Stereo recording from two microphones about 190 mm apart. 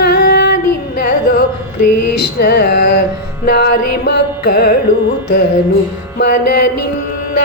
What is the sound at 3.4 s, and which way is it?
Music, 55° left (ahead or behind).